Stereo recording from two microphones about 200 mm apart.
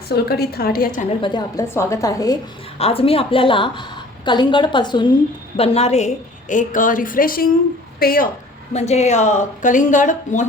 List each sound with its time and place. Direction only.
0.1 s a woman's voice: 50° left (ahead or behind)
1.2 s a woman's voice: 20° left (ahead or behind)
2.7 s a woman's voice: 30° left (ahead or behind); by 8.3 s 45° left (ahead or behind)
8.7 s speech: 35° left (ahead or behind)